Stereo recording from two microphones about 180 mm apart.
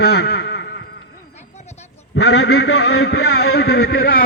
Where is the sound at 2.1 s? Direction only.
70° left (ahead or behind).